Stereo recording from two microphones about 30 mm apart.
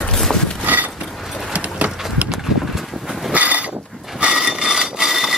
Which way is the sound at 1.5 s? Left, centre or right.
Right.